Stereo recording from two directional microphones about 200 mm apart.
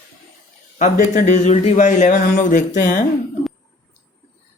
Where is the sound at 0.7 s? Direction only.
40° left (ahead or behind).